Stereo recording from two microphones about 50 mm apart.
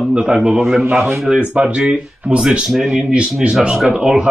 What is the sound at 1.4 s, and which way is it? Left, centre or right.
Speech, centre.